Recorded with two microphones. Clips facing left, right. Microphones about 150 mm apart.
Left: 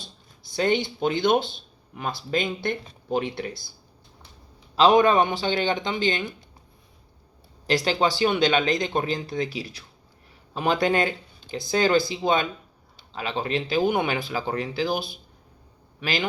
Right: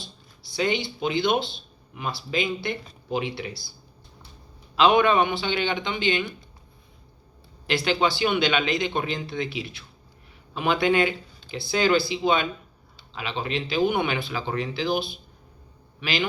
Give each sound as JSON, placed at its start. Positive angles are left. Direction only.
{"t": 0.4, "sound": "speech", "side_deg": 50}
{"t": 4.7, "sound": "speech", "side_deg": 40}
{"t": 7.7, "sound": "a man's voice", "side_deg": 40}